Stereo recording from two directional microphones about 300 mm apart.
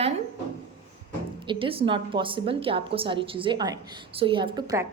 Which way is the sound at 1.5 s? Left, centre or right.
Centre.